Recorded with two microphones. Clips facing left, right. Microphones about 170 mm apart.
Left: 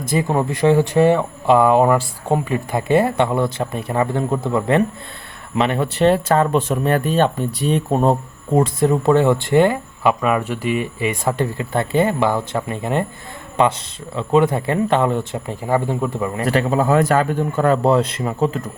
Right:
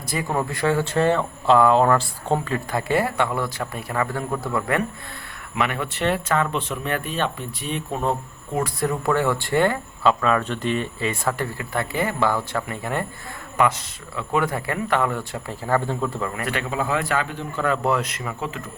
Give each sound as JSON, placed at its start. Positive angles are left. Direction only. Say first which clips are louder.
{"t": 0.1, "sound": "speech", "louder": "left 6 dB", "side_deg": 20}
{"t": 8.5, "sound": "speech", "louder": "left 8 dB", "side_deg": 25}
{"t": 16.3, "sound": "speech", "louder": "left 8 dB", "side_deg": 35}